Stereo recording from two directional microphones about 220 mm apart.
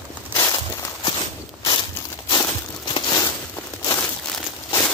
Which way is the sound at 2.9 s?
20° left (ahead or behind).